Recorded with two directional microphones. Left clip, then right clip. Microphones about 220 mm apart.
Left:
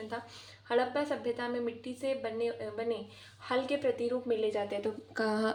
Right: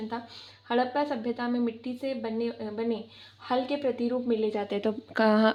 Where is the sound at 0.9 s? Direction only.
40° right (ahead or behind).